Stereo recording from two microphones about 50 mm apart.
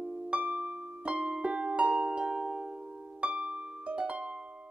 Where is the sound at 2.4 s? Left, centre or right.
Centre.